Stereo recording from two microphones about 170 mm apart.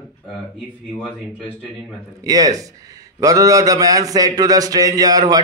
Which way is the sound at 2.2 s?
20° right (ahead or behind).